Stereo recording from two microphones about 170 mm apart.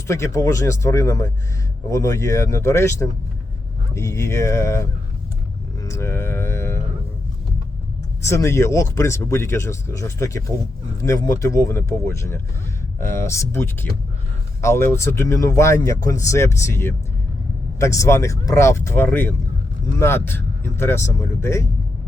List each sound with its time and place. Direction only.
0.1 s speech: 20° left (ahead or behind)
5.8 s a sound: 15° left (ahead or behind)
8.2 s speech: 15° left (ahead or behind)